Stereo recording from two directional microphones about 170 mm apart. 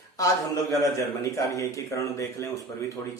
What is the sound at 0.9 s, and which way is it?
A woman's voice, 20° left (ahead or behind).